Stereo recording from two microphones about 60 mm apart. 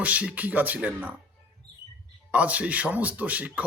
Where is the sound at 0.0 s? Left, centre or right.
Right.